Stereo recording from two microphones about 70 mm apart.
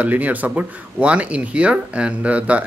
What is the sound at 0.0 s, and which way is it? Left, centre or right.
Speech, right.